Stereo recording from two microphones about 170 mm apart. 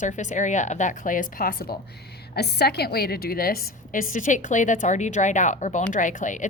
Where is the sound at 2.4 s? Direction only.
70° left (ahead or behind).